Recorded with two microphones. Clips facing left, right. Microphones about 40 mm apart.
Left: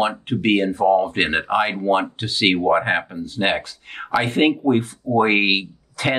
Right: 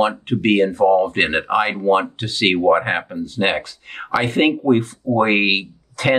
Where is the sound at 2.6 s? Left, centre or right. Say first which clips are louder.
Right 2 dB; centre.